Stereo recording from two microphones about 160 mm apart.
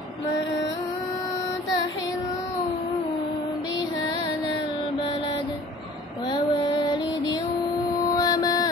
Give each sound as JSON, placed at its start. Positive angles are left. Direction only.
{"t": 6.3, "sound": "music", "side_deg": 30}
{"t": 8.2, "sound": "mantra", "side_deg": 25}